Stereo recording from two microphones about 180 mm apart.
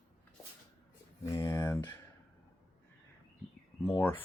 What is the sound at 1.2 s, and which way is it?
Speech, 15° left (ahead or behind).